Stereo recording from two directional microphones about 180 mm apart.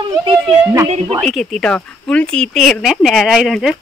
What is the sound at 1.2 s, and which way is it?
Speech, 5° left (ahead or behind).